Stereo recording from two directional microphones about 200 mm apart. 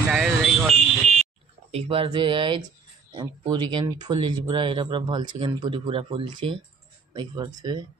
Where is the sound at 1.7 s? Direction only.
30° right (ahead or behind).